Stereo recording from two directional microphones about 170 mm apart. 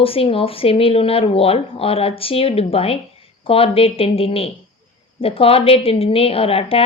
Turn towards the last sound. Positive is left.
turn(degrees=35)  # may be behind; listen again after turning